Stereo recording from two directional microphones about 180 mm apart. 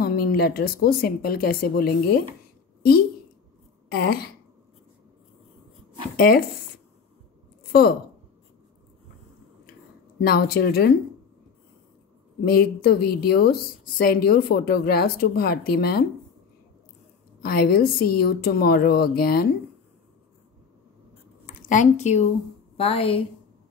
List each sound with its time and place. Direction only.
0.0 s a woman's voice: 55° left (ahead or behind)
3.9 s a woman's voice: 60° left (ahead or behind)
6.1 s a woman's voice: 55° left (ahead or behind)
7.7 s a woman's voice: 55° left (ahead or behind)
10.1 s a woman's voice: 60° left (ahead or behind)
12.4 s a woman's voice: 60° left (ahead or behind)
17.4 s a woman's voice: 60° left (ahead or behind)
21.5 s a woman's voice: 45° left (ahead or behind)